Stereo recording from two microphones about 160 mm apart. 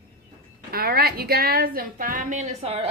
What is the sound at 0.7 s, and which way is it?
A woman's voice, 70° right (ahead or behind).